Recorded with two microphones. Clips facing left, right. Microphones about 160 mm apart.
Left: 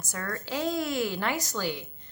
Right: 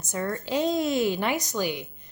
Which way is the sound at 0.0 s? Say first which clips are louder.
Right 6 dB; 20° right (ahead or behind).